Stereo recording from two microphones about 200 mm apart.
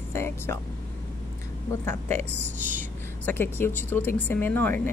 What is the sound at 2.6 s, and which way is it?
Whispering, 40° right (ahead or behind).